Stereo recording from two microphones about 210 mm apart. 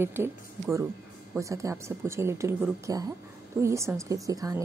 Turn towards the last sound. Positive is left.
turn(degrees=-15)  # may be behind; listen again after turning